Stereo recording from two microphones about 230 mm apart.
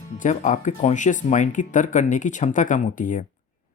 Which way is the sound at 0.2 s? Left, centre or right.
Left.